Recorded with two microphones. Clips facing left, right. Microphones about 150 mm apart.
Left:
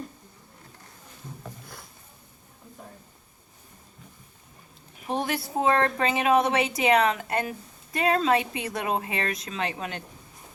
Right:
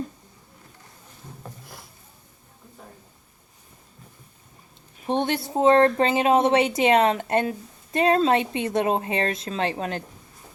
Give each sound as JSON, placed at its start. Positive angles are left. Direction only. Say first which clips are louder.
{"t": 5.0, "sound": "a woman's voice", "louder": "right 4 dB", "side_deg": -25}